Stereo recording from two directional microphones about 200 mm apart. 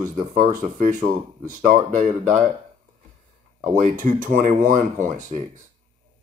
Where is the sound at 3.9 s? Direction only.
40° right (ahead or behind).